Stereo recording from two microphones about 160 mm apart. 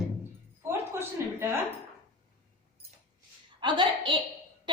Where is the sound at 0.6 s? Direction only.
15° right (ahead or behind).